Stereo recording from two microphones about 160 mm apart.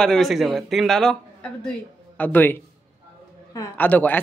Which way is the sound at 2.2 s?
10° left (ahead or behind).